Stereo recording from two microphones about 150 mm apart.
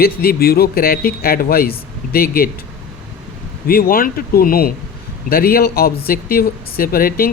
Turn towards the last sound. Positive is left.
turn(degrees=75)  # may be behind; listen again after turning